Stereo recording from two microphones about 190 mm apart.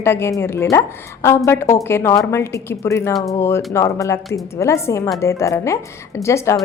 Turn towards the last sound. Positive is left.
turn(degrees=15)  # may be behind; listen again after turning